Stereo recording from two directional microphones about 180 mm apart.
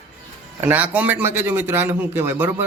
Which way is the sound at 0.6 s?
10° right (ahead or behind).